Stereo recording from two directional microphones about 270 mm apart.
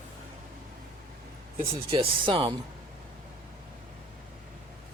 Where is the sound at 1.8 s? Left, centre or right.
Centre.